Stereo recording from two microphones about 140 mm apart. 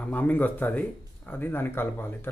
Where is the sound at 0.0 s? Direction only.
10° left (ahead or behind).